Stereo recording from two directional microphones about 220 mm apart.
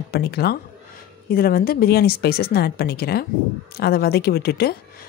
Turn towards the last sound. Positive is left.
turn(degrees=45)  # may be behind; listen again after turning